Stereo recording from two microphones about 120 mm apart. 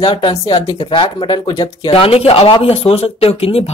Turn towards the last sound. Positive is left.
turn(degrees=55)  # may be behind; listen again after turning